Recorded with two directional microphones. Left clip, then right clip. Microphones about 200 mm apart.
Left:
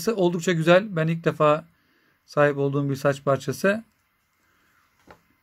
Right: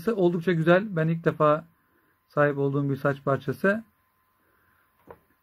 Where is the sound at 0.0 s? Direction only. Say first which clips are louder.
Left 1 dB; 5° left (ahead or behind).